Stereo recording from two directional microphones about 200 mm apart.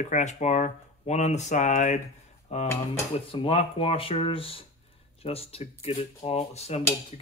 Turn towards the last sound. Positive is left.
turn(degrees=30)  # may be behind; listen again after turning